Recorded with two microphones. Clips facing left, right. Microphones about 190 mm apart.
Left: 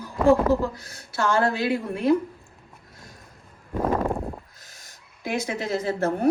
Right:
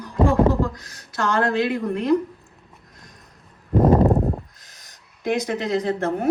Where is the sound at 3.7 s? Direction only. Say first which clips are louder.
Right 8 dB; 35° right (ahead or behind).